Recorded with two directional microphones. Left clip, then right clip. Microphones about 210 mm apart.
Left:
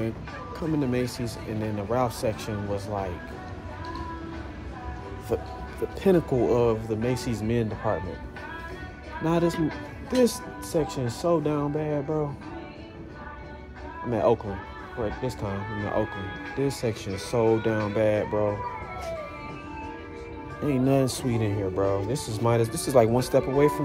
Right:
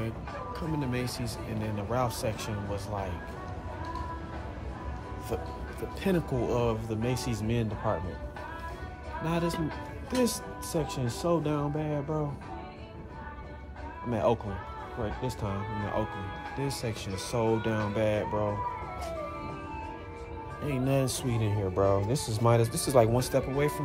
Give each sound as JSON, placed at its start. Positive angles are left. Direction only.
{"t": 0.6, "sound": "speech", "side_deg": -5}
{"t": 5.3, "sound": "speech", "side_deg": -10}
{"t": 9.2, "sound": "speech", "side_deg": -5}
{"t": 14.1, "sound": "speech", "side_deg": -10}
{"t": 20.6, "sound": "speech", "side_deg": -5}
{"t": 21.7, "sound": "speech", "side_deg": -30}